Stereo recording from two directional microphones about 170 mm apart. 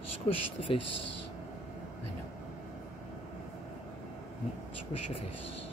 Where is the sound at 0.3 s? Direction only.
35° left (ahead or behind).